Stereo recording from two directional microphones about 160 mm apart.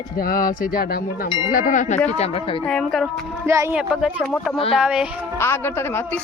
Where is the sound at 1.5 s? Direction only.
55° left (ahead or behind).